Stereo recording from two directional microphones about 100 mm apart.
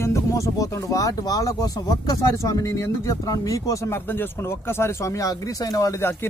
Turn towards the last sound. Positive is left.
turn(degrees=30)  # may be behind; listen again after turning